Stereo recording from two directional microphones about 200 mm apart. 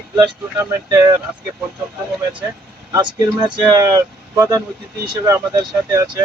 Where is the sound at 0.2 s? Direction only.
15° right (ahead or behind).